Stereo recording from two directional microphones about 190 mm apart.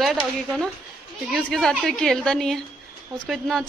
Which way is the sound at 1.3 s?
Centre (ahead or behind).